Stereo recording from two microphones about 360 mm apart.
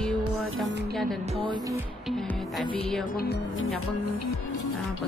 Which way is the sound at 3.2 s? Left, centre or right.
Left.